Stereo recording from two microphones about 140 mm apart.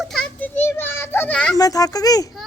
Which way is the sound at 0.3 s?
15° left (ahead or behind).